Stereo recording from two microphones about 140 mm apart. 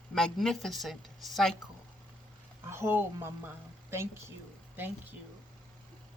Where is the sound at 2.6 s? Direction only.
15° right (ahead or behind).